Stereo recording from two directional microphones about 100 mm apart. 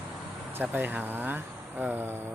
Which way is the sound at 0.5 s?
20° right (ahead or behind).